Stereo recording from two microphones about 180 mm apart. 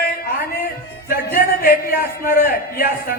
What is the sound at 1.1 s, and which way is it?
A man's voice, 55° left (ahead or behind).